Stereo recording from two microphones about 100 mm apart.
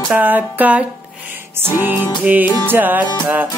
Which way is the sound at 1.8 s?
15° right (ahead or behind).